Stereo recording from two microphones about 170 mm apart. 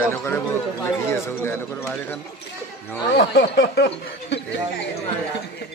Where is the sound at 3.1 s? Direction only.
75° left (ahead or behind).